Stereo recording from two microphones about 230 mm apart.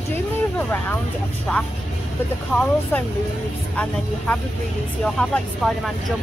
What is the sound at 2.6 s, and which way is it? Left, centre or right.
A woman's voice, centre.